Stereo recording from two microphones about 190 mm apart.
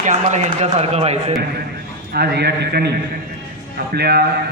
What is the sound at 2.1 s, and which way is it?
Speech, 55° right (ahead or behind).